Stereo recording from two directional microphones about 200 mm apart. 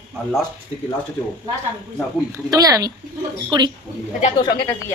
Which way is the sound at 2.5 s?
20° right (ahead or behind).